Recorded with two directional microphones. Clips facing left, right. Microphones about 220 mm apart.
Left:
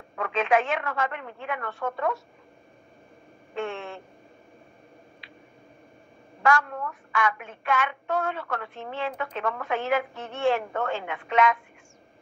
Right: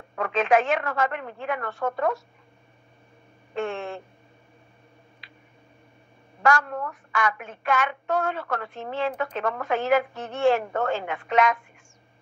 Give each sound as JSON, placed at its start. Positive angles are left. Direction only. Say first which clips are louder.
{"t": 0.1, "sound": "a woman's voice", "louder": "right 2 dB", "side_deg": -40}
{"t": 3.5, "sound": "a woman's voice", "louder": "right 3 dB", "side_deg": -40}
{"t": 6.4, "sound": "a woman's voice", "louder": "right 1 dB", "side_deg": -40}